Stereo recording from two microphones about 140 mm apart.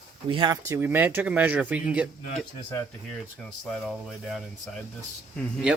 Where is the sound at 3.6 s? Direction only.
Centre (ahead or behind).